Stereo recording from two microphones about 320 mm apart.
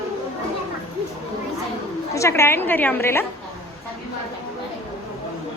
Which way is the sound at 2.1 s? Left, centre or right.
Centre.